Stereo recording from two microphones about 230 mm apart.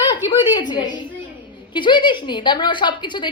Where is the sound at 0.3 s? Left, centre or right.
Centre.